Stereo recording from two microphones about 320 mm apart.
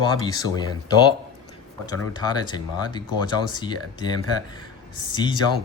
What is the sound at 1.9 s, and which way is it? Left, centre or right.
Speech, centre.